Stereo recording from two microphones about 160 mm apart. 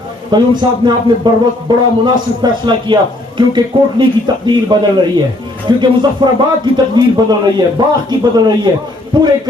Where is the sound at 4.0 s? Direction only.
30° right (ahead or behind).